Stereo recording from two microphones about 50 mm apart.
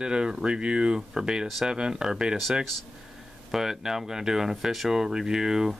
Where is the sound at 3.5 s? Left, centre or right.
Centre.